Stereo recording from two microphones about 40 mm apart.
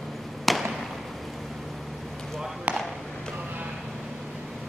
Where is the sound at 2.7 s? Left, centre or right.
Right.